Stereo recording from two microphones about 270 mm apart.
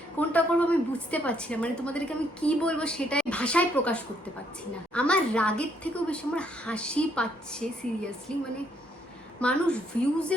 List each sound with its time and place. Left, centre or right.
0.2 s a woman's voice: centre